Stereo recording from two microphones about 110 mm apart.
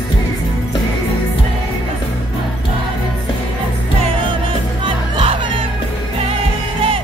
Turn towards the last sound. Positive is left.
turn(degrees=-55)  # may be behind; listen again after turning